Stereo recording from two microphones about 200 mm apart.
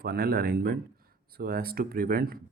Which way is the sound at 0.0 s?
50° right (ahead or behind).